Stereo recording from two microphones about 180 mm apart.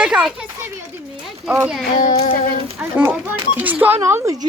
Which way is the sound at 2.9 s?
10° right (ahead or behind).